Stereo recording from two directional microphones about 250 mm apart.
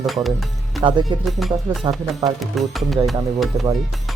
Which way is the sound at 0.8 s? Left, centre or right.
Centre.